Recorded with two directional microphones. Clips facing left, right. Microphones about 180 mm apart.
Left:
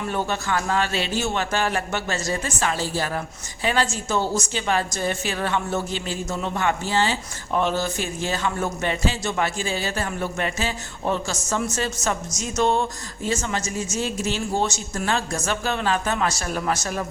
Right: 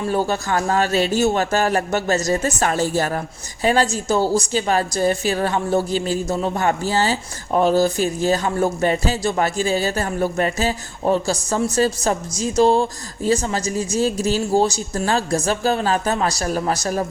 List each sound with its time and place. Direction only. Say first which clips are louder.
0.0 s a man's voice: right 5 dB; 35° right (ahead or behind)